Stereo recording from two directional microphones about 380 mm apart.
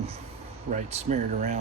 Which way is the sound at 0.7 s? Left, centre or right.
Centre.